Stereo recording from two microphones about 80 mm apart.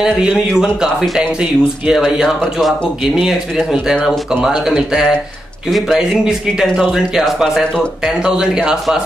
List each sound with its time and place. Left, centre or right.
0.0 s speech: centre
2.2 s speech: centre
3.2 s speech: centre